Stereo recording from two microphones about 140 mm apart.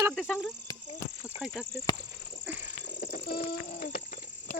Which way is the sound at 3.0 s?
90° left.